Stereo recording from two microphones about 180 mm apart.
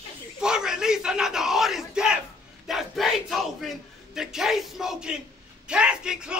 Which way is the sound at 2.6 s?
Centre (ahead or behind).